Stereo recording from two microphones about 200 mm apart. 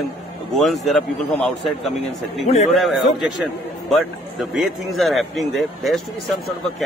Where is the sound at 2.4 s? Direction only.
35° left (ahead or behind).